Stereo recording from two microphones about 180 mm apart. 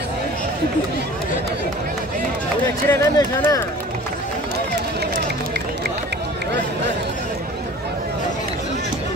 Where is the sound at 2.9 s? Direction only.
15° left (ahead or behind).